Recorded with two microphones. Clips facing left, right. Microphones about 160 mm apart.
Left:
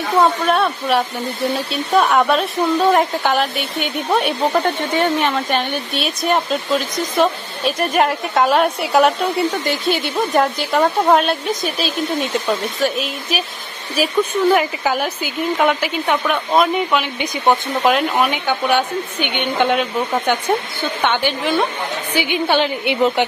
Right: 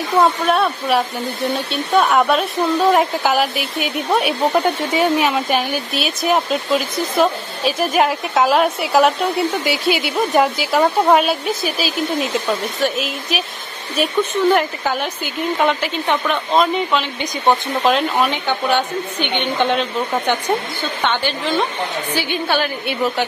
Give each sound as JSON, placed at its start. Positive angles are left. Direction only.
{"t": 0.2, "sound": "speech", "side_deg": 0}